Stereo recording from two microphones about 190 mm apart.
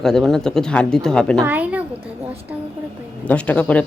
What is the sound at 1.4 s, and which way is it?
Speech, 10° right (ahead or behind).